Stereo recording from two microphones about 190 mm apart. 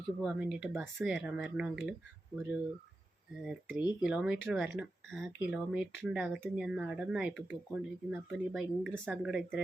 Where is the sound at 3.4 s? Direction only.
Centre (ahead or behind).